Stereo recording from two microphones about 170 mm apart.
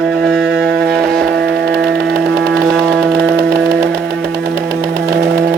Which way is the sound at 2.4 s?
65° right (ahead or behind).